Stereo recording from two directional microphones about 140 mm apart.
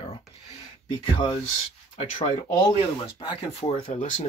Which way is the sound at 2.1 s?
45° left (ahead or behind).